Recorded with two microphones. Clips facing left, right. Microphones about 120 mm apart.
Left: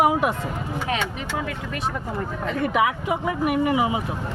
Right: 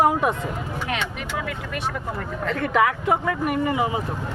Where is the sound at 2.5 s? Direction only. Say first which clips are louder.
Right 1 dB; 15° left (ahead or behind).